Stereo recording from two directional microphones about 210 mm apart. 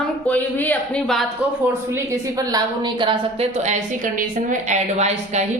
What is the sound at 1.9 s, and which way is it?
A woman's voice, 15° right (ahead or behind).